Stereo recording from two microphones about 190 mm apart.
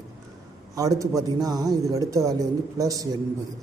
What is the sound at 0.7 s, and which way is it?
Speech, 20° right (ahead or behind).